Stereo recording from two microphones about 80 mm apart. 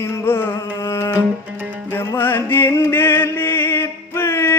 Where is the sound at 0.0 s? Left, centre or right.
Left.